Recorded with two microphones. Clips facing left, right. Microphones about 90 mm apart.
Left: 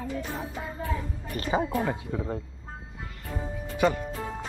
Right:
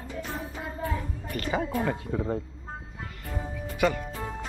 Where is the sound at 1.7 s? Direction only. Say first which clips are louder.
Even; 10° left (ahead or behind).